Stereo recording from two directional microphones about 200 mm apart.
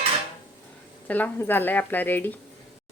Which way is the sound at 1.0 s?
10° left (ahead or behind).